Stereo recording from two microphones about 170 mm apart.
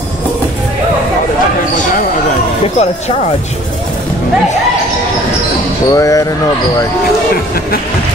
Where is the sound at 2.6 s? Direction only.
40° left (ahead or behind).